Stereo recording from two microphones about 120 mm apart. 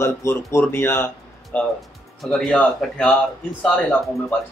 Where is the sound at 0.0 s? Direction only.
25° left (ahead or behind).